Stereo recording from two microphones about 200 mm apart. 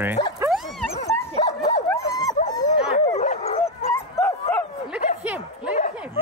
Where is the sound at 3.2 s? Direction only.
35° left (ahead or behind).